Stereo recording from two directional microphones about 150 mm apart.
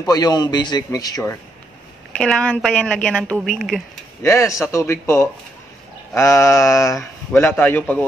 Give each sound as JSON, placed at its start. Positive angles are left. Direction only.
{"t": 0.0, "sound": "a man's voice", "side_deg": 25}
{"t": 2.1, "sound": "a woman's voice", "side_deg": 5}
{"t": 4.2, "sound": "a man's voice", "side_deg": 20}